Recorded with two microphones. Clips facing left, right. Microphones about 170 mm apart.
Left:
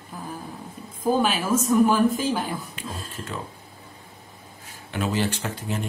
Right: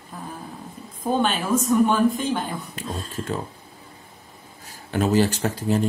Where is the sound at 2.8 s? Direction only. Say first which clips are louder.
Right 3 dB; 40° right (ahead or behind).